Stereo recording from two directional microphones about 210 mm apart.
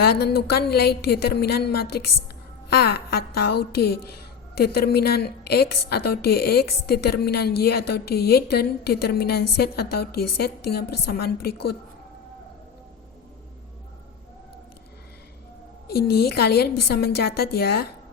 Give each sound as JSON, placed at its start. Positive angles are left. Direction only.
{"t": 0.0, "sound": "a woman's voice", "side_deg": 50}
{"t": 15.9, "sound": "a woman's voice", "side_deg": 50}